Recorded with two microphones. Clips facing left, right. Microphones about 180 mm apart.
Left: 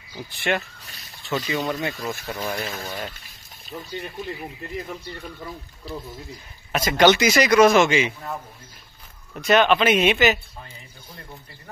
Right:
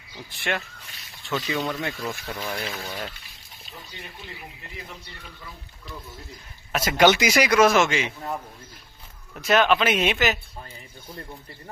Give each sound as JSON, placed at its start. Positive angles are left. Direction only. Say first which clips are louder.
{"t": 0.1, "sound": "speech", "louder": "left 4 dB", "side_deg": 0}
{"t": 2.4, "sound": "speech", "louder": "left 3 dB", "side_deg": 45}
{"t": 5.9, "sound": "speech", "louder": "left 7 dB", "side_deg": 35}
{"t": 6.7, "sound": "speech", "louder": "left 2 dB", "side_deg": -5}
{"t": 9.3, "sound": "speech", "louder": "left 2 dB", "side_deg": 0}